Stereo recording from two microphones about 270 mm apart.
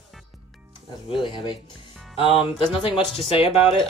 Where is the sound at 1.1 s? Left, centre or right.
Centre.